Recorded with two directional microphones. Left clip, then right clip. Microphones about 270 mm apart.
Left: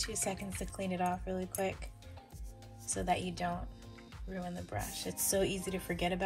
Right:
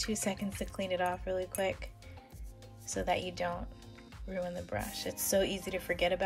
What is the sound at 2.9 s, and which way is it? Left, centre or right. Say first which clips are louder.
Speech: right 1 dB; right.